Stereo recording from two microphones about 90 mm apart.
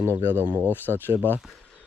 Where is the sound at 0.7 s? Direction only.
20° left (ahead or behind).